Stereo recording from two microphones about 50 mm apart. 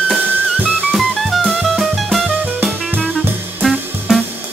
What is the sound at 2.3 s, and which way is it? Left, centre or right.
Music, right.